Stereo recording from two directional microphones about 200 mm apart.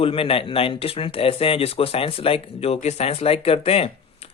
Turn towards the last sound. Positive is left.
turn(degrees=30)  # may be behind; listen again after turning